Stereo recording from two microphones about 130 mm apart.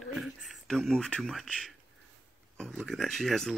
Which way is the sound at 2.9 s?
Centre (ahead or behind).